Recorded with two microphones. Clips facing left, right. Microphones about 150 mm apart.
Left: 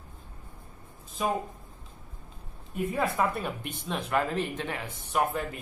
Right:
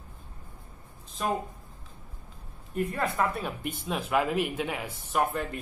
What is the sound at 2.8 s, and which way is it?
Speech, 5° left (ahead or behind).